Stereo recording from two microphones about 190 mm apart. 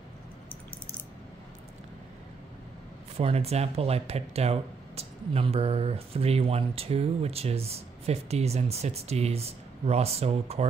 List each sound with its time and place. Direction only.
3.2 s speech: 30° right (ahead or behind)